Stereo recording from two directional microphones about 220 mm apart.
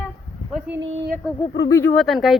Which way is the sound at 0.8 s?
55° right (ahead or behind).